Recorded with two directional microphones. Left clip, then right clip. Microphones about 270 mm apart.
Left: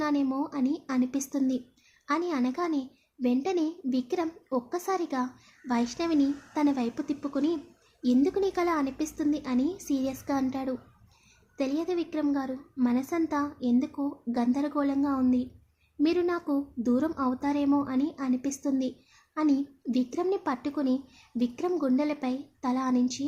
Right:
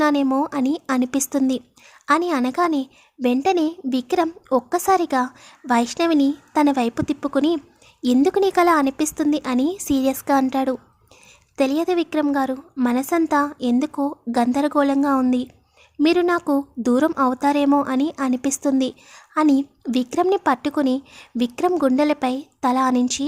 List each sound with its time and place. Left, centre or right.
0.0 s a woman's voice: right